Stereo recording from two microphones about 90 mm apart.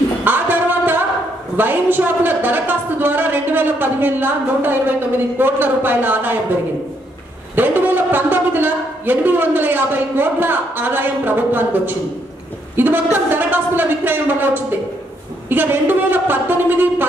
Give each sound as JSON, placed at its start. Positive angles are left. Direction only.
{"t": 0.2, "sound": "music", "side_deg": -20}
{"t": 1.6, "sound": "speech", "side_deg": -20}
{"t": 7.5, "sound": "speech", "side_deg": -20}